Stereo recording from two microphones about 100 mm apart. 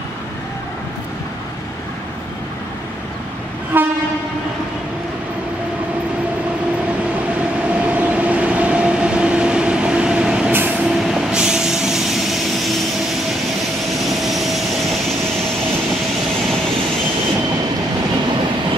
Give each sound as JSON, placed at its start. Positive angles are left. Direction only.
{"t": 3.7, "sound": "train", "side_deg": -20}
{"t": 7.8, "sound": "train", "side_deg": -15}
{"t": 10.5, "sound": "vehicle", "side_deg": -20}
{"t": 10.9, "sound": "vehicle", "side_deg": -5}
{"t": 14.0, "sound": "vehicle", "side_deg": 0}